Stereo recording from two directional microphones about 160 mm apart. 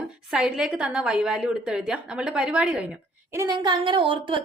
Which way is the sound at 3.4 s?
25° right (ahead or behind).